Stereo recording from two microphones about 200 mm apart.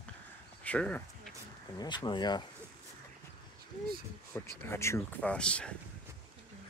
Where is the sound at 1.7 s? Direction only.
20° left (ahead or behind).